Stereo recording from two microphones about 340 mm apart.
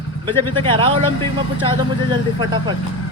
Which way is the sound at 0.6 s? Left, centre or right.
Centre.